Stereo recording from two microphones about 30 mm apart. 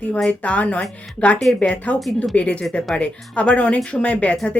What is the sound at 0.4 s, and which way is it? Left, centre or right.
Speech, left.